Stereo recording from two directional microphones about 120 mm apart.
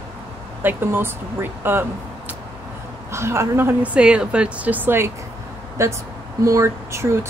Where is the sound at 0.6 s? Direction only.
15° right (ahead or behind).